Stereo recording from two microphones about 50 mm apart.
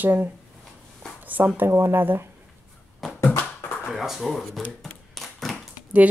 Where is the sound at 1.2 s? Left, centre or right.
Right.